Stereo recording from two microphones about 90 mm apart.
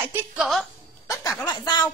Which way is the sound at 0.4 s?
Centre (ahead or behind).